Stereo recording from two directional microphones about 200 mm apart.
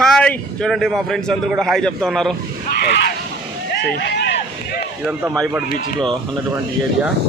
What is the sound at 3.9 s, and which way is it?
Speech, 55° left (ahead or behind).